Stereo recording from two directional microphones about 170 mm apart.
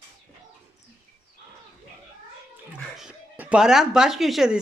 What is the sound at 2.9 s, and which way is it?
Speech, 5° right (ahead or behind).